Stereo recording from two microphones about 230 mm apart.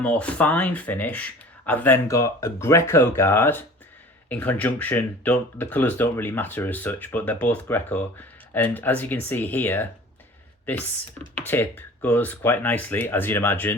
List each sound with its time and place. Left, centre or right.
0.0 s speech: centre
11.4 s speech: centre